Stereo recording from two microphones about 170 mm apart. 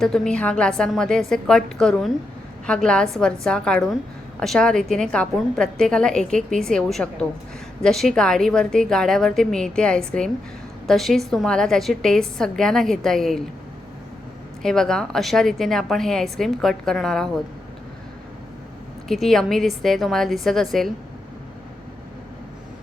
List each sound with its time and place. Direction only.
0.0 s a woman's voice: 5° left (ahead or behind)
14.6 s a woman's voice: 5° left (ahead or behind)
19.0 s a woman's voice: centre (ahead or behind)